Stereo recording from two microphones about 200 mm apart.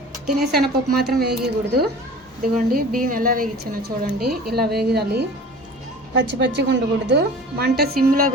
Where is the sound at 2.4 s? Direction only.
45° right (ahead or behind).